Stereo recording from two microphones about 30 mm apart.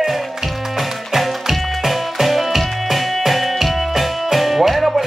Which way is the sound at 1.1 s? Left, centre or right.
Centre.